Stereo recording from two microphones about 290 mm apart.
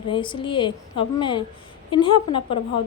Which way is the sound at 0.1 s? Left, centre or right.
Centre.